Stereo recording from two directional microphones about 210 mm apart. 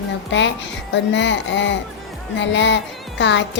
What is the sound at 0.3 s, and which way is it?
A woman's voice, 60° left (ahead or behind).